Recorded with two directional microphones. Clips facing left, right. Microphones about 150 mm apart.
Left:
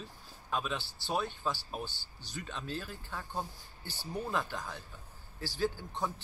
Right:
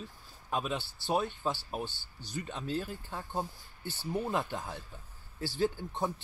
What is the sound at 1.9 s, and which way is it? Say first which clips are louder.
Speech: right 3 dB; 50° right (ahead or behind).